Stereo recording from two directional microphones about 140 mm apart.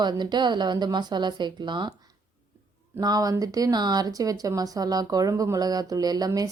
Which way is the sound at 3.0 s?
25° right (ahead or behind).